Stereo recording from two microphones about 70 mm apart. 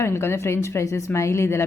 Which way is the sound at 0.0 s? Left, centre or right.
Left.